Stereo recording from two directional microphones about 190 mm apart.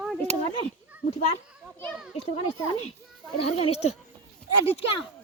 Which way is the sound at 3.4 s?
35° left (ahead or behind).